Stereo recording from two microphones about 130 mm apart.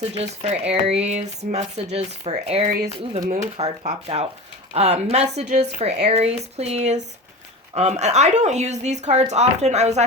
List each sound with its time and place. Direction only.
0.0 s speech: 50° right (ahead or behind)
3.2 s speech: 65° right (ahead or behind)